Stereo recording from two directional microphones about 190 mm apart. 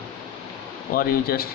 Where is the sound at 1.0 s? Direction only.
50° left (ahead or behind).